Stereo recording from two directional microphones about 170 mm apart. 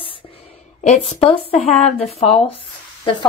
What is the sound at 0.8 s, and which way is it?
A woman's voice, 45° left (ahead or behind).